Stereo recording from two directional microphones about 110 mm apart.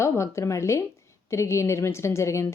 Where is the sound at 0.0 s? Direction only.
25° left (ahead or behind).